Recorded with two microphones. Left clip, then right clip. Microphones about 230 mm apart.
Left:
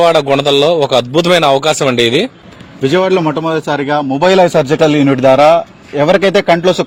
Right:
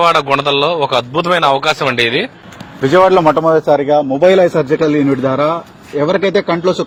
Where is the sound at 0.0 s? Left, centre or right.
Left.